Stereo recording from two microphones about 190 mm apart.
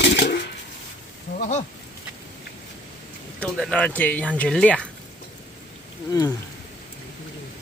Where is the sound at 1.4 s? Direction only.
40° left (ahead or behind).